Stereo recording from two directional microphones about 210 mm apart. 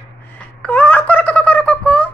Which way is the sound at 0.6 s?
10° left (ahead or behind).